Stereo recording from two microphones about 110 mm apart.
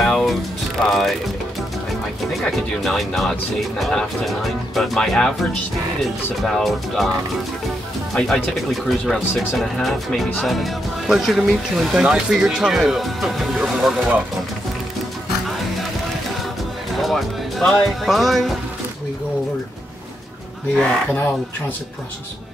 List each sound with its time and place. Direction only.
0.0 s music: 5° left (ahead or behind)
0.8 s speech: centre (ahead or behind)
2.4 s speech: 5° left (ahead or behind)
8.1 s speech: centre (ahead or behind)
16.9 s speech: centre (ahead or behind)
20.7 s speech: 10° left (ahead or behind)